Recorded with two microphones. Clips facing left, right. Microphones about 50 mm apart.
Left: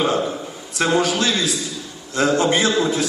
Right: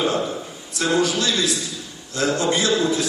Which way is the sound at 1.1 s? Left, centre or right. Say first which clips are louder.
Left 1 dB; left.